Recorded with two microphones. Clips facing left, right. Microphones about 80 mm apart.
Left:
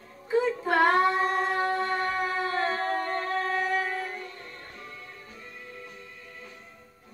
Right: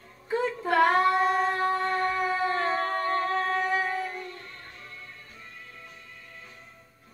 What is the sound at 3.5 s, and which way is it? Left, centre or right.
Music, centre.